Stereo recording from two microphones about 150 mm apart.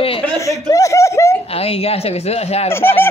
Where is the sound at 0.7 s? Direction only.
20° left (ahead or behind).